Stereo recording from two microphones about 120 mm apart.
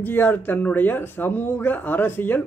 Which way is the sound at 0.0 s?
15° left (ahead or behind).